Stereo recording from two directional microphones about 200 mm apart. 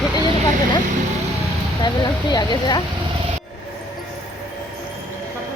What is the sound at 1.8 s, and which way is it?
A woman's voice, 20° left (ahead or behind).